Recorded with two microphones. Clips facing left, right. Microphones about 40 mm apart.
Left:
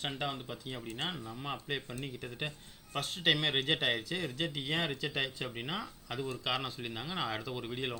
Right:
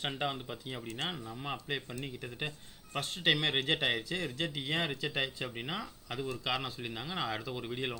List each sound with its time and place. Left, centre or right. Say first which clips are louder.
0.0 s speech: right 2 dB; centre